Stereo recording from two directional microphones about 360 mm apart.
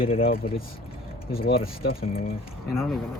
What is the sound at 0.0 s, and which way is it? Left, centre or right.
Speech, centre.